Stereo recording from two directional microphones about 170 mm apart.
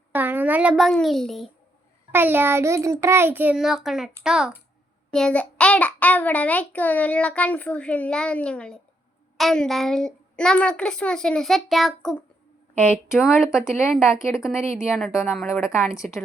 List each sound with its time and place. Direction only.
0.1 s a woman's voice: 10° right (ahead or behind)
2.1 s a child's voice: 10° right (ahead or behind)
15.4 s a child's voice: 15° left (ahead or behind)
15.8 s a woman's voice: centre (ahead or behind)